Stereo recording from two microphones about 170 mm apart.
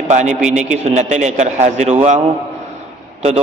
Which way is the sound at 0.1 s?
45° right (ahead or behind).